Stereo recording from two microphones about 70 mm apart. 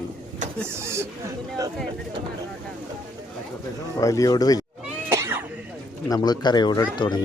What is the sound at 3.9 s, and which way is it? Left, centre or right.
Speech, left.